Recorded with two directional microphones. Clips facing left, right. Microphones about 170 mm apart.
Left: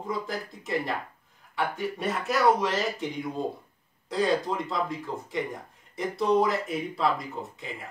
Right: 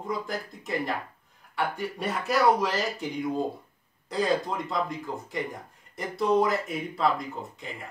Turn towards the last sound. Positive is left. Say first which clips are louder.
# left 1 dB
turn(degrees=0)  # may be behind; listen again after turning